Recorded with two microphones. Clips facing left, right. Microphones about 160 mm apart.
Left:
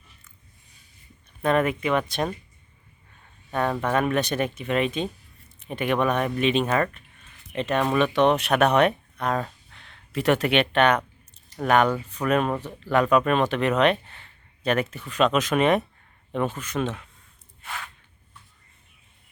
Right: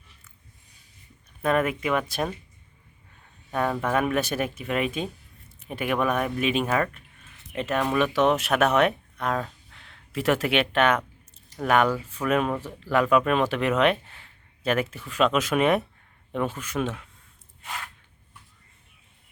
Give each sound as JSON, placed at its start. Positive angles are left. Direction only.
{"t": 1.4, "sound": "speech", "side_deg": -5}
{"t": 3.5, "sound": "speech", "side_deg": -5}